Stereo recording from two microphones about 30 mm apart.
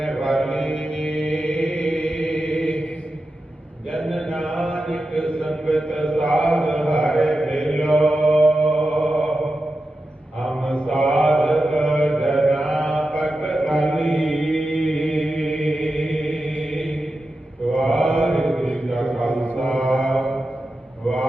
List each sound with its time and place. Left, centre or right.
0.0 s mantra: left
4.4 s mantra: left
8.6 s music: left
10.4 s mantra: left
12.6 s mantra: left
13.7 s mantra: left
14.1 s chant: left
17.8 s mantra: left